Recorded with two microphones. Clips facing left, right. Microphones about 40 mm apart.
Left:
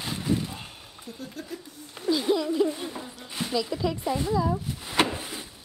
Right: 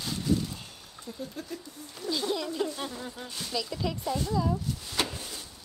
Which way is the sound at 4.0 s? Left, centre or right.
Left.